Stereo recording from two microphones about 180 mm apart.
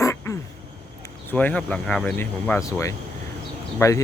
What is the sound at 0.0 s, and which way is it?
Quack, 15° left (ahead or behind).